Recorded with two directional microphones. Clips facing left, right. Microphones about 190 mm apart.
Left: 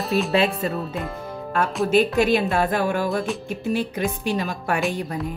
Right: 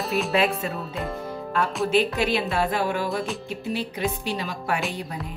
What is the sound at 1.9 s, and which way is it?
Speech, 45° left (ahead or behind).